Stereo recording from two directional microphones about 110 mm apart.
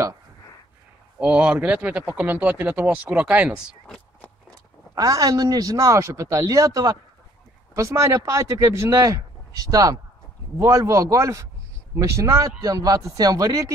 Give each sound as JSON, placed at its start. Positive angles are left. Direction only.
{"t": 1.2, "sound": "speech", "side_deg": -10}
{"t": 3.8, "sound": "a sound", "side_deg": 10}
{"t": 4.9, "sound": "a man's voice", "side_deg": -35}